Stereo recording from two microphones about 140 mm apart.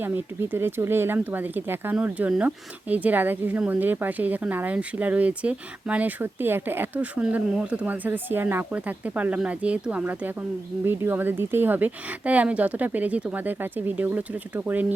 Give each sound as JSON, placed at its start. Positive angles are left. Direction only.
{"t": 0.0, "sound": "speech", "side_deg": -15}